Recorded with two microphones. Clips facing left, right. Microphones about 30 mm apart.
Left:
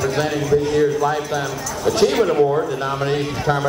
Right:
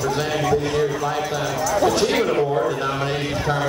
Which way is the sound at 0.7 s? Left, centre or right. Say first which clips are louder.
Left 4 dB; centre.